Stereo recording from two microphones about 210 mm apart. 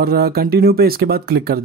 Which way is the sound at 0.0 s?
45° right (ahead or behind).